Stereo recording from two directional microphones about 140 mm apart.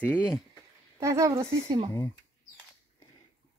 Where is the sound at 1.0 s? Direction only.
20° right (ahead or behind).